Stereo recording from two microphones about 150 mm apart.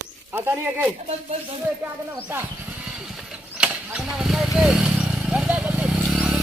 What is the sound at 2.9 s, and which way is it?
Vehicle, 5° right (ahead or behind).